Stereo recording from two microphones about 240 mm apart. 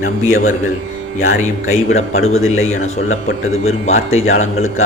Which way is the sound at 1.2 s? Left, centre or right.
Left.